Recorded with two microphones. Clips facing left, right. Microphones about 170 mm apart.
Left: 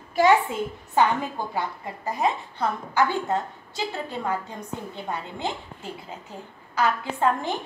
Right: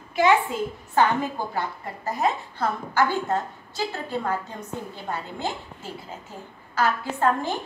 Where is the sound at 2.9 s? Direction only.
20° left (ahead or behind).